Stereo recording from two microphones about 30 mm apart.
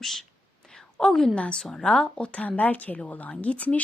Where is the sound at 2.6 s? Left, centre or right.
Left.